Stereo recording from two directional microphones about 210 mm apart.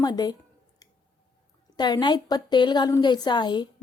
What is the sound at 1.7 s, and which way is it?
A woman's voice, 20° left (ahead or behind).